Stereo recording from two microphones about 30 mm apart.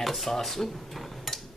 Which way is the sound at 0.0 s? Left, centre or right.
Centre.